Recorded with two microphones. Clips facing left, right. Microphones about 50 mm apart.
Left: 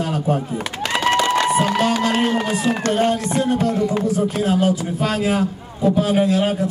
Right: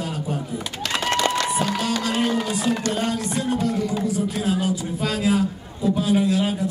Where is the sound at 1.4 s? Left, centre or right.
Left.